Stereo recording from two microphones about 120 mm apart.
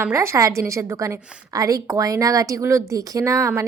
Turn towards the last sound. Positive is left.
turn(degrees=-25)  # may be behind; listen again after turning